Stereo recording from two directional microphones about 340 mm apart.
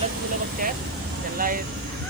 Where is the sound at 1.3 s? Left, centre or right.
Right.